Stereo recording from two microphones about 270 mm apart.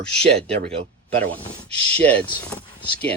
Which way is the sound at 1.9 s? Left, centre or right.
Centre.